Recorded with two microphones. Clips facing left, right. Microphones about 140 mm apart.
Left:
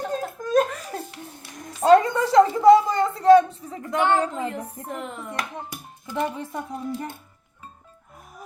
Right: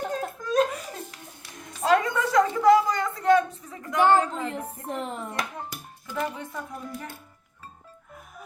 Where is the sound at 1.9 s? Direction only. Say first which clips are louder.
Left 6 dB; 30° left (ahead or behind).